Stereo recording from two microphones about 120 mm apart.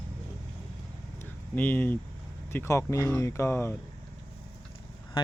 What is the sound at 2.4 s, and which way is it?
Speech, 20° left (ahead or behind).